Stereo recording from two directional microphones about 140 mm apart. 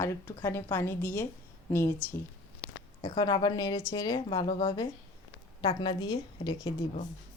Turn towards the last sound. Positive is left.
turn(degrees=30)  # may be behind; listen again after turning